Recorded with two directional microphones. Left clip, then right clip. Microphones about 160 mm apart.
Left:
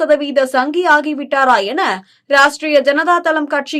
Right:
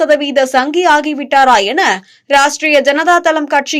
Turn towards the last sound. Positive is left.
turn(degrees=-10)  # may be behind; listen again after turning